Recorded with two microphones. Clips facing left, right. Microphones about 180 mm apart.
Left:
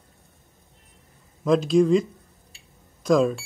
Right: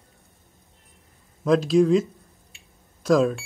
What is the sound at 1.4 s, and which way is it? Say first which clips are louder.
Speech: even; centre (ahead or behind).